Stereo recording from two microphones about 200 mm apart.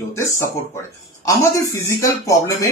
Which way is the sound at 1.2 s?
15° left (ahead or behind).